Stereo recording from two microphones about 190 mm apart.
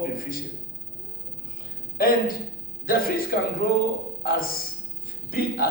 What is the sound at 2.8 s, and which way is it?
Speech, 50° left (ahead or behind).